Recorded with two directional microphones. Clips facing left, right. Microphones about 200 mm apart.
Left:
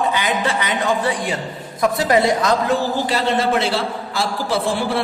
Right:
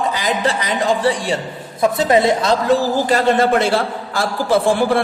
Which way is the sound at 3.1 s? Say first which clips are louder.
Right 5 dB; 50° right (ahead or behind).